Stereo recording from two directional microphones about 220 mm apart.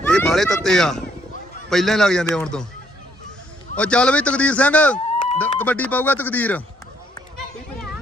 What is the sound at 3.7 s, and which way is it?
Speech, 5° left (ahead or behind).